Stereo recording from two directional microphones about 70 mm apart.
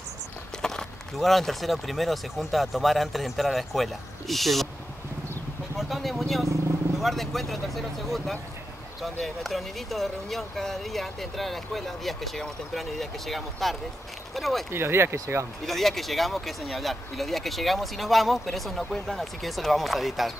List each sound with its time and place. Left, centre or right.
0.6 s speech: centre
5.8 s speech: centre
14.7 s speech: right
15.6 s speech: centre